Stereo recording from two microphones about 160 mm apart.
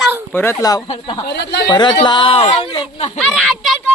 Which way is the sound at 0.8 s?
35° left (ahead or behind).